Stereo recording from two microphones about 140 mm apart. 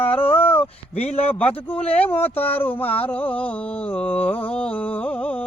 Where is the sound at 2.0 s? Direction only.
15° left (ahead or behind).